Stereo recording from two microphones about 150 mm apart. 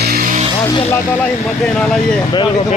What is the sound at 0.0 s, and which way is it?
Music, 75° right (ahead or behind).